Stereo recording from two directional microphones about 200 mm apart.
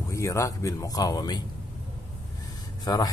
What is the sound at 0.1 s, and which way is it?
Speech, 15° left (ahead or behind).